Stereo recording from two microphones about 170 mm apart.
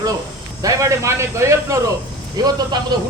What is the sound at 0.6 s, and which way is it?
Speech, 20° right (ahead or behind).